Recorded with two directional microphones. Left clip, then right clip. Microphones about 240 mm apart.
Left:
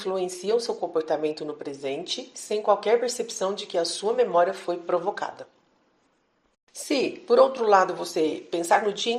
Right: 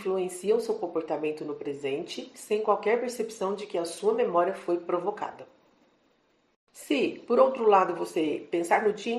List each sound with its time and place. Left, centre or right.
0.0 s speech: left
6.8 s speech: left